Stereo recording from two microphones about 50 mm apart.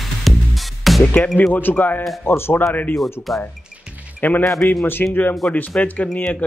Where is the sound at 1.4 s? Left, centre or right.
Left.